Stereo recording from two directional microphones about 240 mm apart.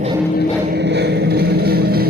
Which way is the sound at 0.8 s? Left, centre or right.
Right.